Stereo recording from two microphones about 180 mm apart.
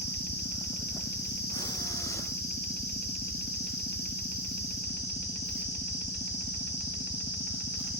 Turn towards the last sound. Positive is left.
turn(degrees=65)  # may be behind; listen again after turning